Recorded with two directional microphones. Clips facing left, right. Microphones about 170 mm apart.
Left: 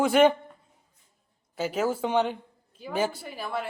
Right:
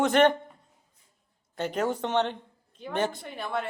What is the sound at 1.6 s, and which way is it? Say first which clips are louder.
A woman's voice: left 1 dB; 5° left (ahead or behind).